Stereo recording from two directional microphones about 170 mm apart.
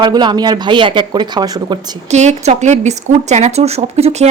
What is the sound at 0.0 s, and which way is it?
Speech, 25° right (ahead or behind).